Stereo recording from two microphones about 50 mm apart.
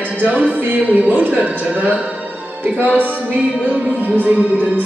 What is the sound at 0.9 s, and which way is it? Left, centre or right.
Music, right.